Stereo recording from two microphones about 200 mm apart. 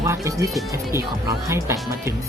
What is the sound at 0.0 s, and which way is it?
Speech, 15° right (ahead or behind).